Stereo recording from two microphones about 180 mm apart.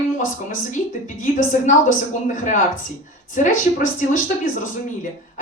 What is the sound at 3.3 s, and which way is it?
Speech, 45° left (ahead or behind).